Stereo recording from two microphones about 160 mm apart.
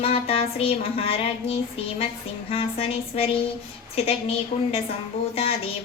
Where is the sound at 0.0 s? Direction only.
35° left (ahead or behind).